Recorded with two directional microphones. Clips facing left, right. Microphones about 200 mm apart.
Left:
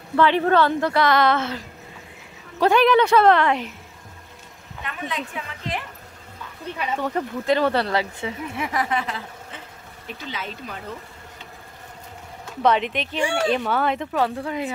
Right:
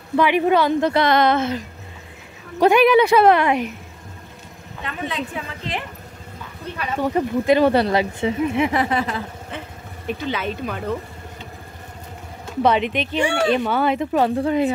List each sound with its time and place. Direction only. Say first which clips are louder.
0.1 s speech: right 1 dB; 15° right (ahead or behind)
2.6 s speech: right 3 dB; 10° right (ahead or behind)
4.8 s speech: right 3 dB; 30° right (ahead or behind)
7.0 s speech: right 10 dB; 10° right (ahead or behind); by 9.0 s 30° right (ahead or behind)
10.0 s speech: right 9 dB; 60° right (ahead or behind)
12.6 s speech: right 1 dB; 5° right (ahead or behind)
13.2 s speech: right 2 dB; 65° right (ahead or behind)
13.7 s speech: right 3 dB; 5° right (ahead or behind)
14.1 s a woman's voice: right 6 dB; 25° right (ahead or behind)